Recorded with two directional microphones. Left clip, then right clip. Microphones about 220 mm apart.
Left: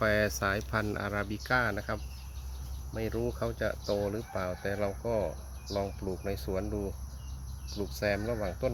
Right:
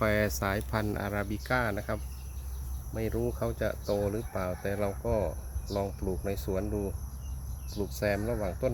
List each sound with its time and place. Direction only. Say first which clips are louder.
0.0 s speech: even; 5° right (ahead or behind)